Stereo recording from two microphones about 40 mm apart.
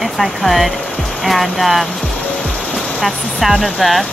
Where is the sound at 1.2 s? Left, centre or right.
Centre.